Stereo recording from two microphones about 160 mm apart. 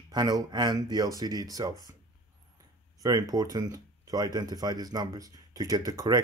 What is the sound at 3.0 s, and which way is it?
Speech, 25° right (ahead or behind).